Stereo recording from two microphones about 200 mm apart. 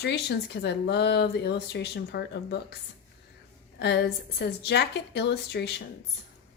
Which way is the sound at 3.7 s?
55° left (ahead or behind).